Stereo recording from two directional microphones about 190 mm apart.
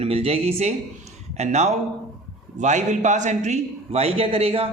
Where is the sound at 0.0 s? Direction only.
30° right (ahead or behind).